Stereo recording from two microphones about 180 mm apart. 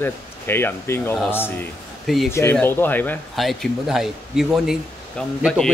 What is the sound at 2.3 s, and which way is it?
Speech, 10° left (ahead or behind).